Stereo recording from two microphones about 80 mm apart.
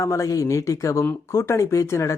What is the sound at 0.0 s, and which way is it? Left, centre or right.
Speech, left.